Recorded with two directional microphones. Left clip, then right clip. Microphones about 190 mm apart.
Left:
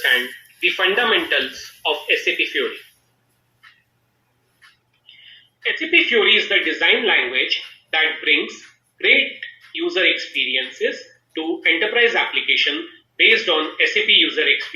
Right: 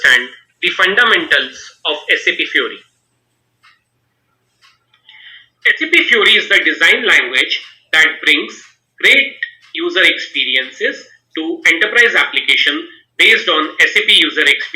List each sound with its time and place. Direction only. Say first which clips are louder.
0.6 s speech: right 6 dB; 20° right (ahead or behind)
5.6 s speech: right 6 dB; 20° right (ahead or behind)